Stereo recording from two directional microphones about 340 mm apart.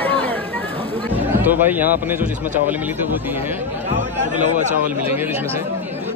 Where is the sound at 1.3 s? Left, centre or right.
Centre.